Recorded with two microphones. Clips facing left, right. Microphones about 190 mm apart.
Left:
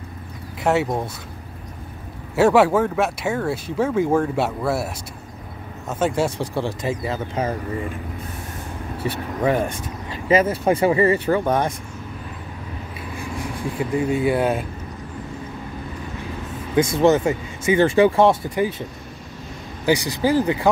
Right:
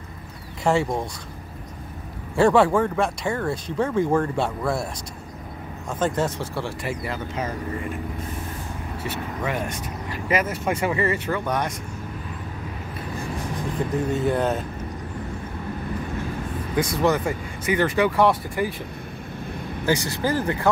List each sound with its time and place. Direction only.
0.7 s speech: 5° left (ahead or behind)
2.3 s speech: 5° left (ahead or behind); by 7.5 s 25° left (ahead or behind)
9.0 s speech: 35° left (ahead or behind)
13.4 s speech: 10° left (ahead or behind)
16.7 s speech: 25° left (ahead or behind)
19.9 s speech: 15° left (ahead or behind)